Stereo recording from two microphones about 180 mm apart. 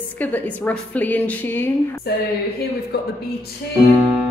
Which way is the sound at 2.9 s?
60° left (ahead or behind).